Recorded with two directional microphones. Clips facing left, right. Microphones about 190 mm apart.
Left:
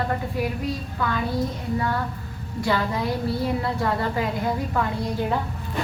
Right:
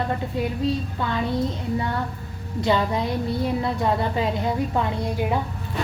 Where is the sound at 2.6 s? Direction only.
20° right (ahead or behind).